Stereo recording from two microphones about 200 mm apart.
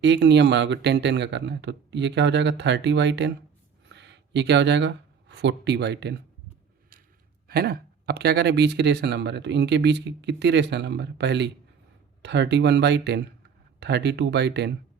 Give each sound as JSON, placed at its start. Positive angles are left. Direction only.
{"t": 0.0, "sound": "speech", "side_deg": -60}
{"t": 7.4, "sound": "speech", "side_deg": -50}